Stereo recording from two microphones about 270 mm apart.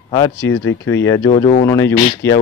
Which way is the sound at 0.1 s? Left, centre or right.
Centre.